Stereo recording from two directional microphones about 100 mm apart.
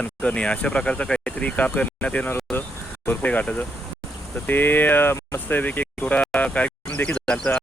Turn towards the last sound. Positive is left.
turn(degrees=10)  # may be behind; listen again after turning